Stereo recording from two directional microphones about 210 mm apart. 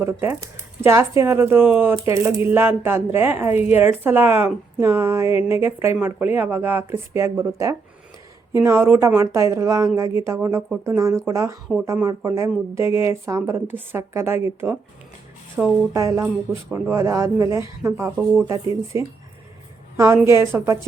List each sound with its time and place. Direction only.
0.0 s speech: 10° right (ahead or behind)